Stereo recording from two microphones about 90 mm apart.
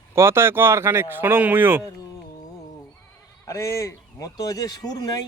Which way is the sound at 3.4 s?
35° left (ahead or behind).